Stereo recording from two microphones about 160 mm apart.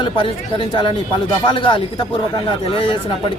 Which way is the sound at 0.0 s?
35° left (ahead or behind).